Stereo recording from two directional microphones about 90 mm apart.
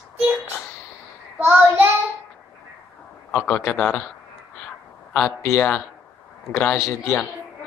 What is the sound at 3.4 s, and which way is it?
Speech, 15° left (ahead or behind).